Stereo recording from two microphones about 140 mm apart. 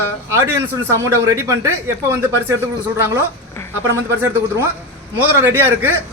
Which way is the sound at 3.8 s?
20° right (ahead or behind).